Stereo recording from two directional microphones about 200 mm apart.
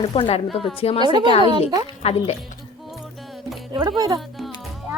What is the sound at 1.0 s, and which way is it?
Speech, 25° right (ahead or behind).